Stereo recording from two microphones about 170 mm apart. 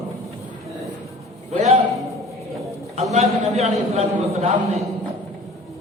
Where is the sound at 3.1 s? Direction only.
40° right (ahead or behind).